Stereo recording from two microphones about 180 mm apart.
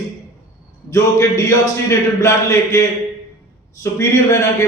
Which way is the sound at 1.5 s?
15° left (ahead or behind).